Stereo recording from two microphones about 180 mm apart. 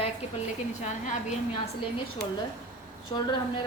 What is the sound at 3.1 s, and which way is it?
Speech, 30° left (ahead or behind).